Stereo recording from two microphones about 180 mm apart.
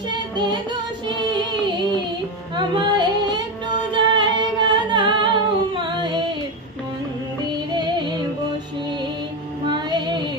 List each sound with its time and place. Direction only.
1.0 s music: 25° right (ahead or behind)
3.9 s humming: 25° right (ahead or behind)
7.7 s music: 25° right (ahead or behind)
9.7 s female singing: 25° right (ahead or behind)